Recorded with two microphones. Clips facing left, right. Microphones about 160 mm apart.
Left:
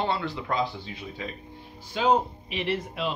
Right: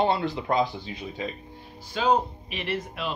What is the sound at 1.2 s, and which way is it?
Speech, 20° right (ahead or behind).